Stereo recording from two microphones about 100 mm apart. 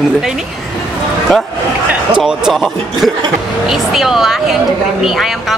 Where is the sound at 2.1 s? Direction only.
5° right (ahead or behind).